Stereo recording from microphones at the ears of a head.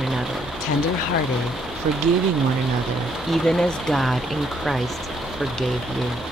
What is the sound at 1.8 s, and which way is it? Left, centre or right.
Speech, right.